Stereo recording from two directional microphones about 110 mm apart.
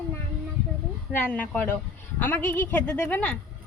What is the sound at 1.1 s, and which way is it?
A woman's voice, 15° left (ahead or behind).